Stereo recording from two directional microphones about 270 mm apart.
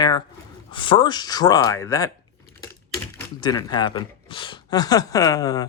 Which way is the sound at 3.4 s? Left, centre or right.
Centre.